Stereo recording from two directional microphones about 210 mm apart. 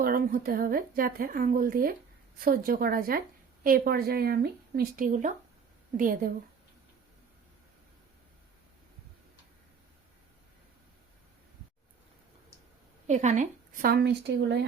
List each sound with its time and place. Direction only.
0.0 s a woman's voice: 45° right (ahead or behind)
13.1 s a woman's voice: 35° right (ahead or behind); by 14.6 s 55° right (ahead or behind)